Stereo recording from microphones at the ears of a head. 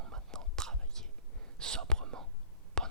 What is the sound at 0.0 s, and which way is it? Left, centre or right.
Whispering, right.